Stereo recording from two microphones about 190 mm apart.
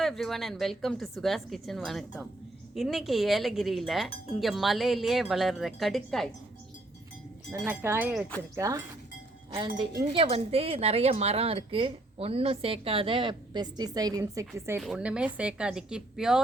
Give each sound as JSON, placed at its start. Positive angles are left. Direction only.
{"t": 0.0, "sound": "speech", "side_deg": 0}
{"t": 7.7, "sound": "speech", "side_deg": -10}
{"t": 10.1, "sound": "a woman's voice", "side_deg": -30}
{"t": 14.8, "sound": "speech", "side_deg": -5}